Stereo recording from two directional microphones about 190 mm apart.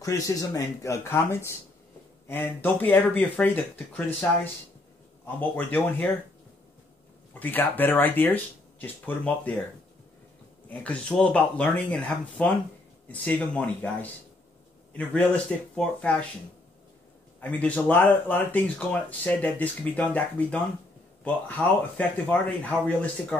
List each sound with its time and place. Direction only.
0.0 s speech: 15° left (ahead or behind)
7.3 s speech: 10° left (ahead or behind)
10.7 s speech: 5° left (ahead or behind)
14.9 s a man's voice: 5° left (ahead or behind)
17.4 s speech: 10° left (ahead or behind)